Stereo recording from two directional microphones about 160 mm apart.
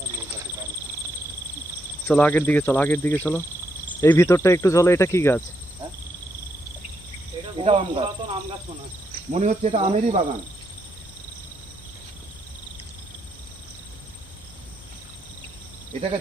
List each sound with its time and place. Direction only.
2.0 s speech: 10° left (ahead or behind)
7.6 s speech: 40° right (ahead or behind)
9.3 s speech: 50° right (ahead or behind)
15.9 s speech: 40° right (ahead or behind)